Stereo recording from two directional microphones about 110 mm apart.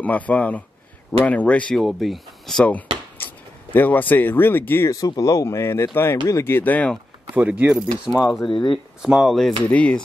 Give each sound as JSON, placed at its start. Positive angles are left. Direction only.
{"t": 0.0, "sound": "a man's voice", "side_deg": 15}
{"t": 1.8, "sound": "speech", "side_deg": 0}
{"t": 4.9, "sound": "speech", "side_deg": 35}
{"t": 7.3, "sound": "speech", "side_deg": -15}
{"t": 8.5, "sound": "speech", "side_deg": 50}
{"t": 9.0, "sound": "speech", "side_deg": -5}
{"t": 9.6, "sound": "a man's voice", "side_deg": 10}